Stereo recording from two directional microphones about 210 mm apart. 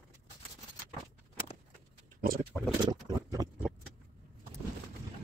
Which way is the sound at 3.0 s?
15° right (ahead or behind).